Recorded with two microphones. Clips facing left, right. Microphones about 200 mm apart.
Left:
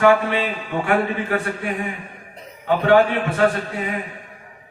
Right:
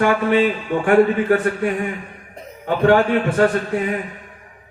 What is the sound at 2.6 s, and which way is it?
Speech, 45° right (ahead or behind).